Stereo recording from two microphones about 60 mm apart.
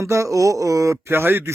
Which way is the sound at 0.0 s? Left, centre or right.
Right.